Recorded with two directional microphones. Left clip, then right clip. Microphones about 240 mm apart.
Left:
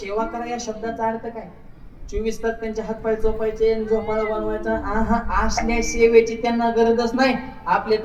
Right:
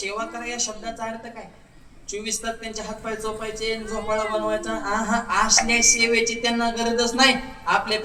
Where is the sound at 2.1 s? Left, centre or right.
Centre.